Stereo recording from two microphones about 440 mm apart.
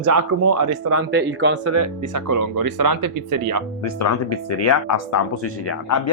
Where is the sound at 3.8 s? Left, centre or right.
Left.